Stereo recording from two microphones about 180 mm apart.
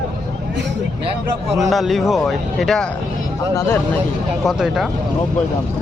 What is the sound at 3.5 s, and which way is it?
Speech, 15° left (ahead or behind).